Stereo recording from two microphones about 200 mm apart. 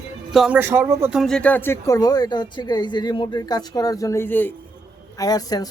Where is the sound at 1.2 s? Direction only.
5° left (ahead or behind).